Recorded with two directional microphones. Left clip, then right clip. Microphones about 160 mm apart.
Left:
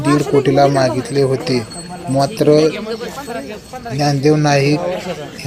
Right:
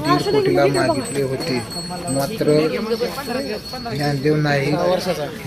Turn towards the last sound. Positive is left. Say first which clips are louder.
# right 2 dB
turn(degrees=-10)  # may be behind; listen again after turning